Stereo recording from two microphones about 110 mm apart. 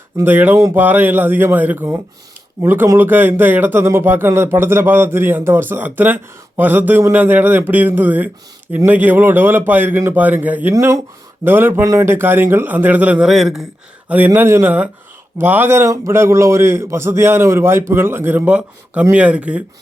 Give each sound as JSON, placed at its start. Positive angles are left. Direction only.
{"t": 0.2, "sound": "a man's voice", "side_deg": -15}
{"t": 10.8, "sound": "a man's voice", "side_deg": -25}
{"t": 14.3, "sound": "a man's voice", "side_deg": -20}